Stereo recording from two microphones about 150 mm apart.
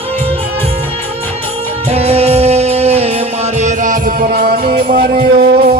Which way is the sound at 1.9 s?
40° right (ahead or behind).